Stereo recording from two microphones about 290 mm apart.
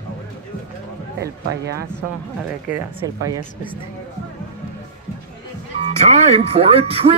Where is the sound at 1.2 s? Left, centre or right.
Right.